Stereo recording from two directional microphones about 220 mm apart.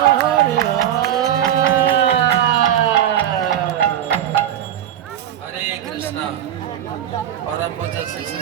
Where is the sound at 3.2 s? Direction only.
5° left (ahead or behind).